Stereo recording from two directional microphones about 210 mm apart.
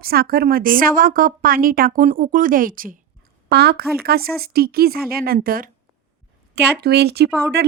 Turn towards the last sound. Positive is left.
turn(degrees=-50)  # may be behind; listen again after turning